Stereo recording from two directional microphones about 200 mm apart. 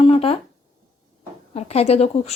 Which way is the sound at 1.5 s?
30° left (ahead or behind).